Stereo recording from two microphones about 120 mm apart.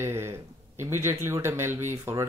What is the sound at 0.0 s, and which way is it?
Speech, 20° right (ahead or behind).